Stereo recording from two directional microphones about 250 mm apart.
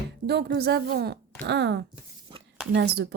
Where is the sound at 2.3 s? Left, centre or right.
Centre.